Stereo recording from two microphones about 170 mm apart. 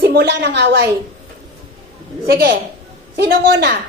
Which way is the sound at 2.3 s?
70° right (ahead or behind).